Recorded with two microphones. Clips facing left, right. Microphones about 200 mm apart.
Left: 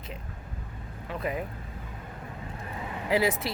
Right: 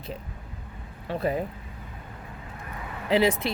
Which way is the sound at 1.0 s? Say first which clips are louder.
Right 5 dB; 30° right (ahead or behind).